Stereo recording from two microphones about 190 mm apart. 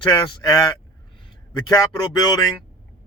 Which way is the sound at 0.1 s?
20° left (ahead or behind).